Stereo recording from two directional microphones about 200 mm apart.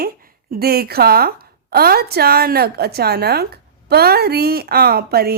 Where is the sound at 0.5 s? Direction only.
50° right (ahead or behind).